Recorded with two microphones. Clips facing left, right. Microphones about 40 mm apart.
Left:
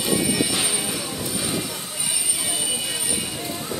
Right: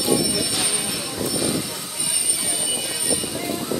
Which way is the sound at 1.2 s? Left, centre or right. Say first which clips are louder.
Right 5 dB; left.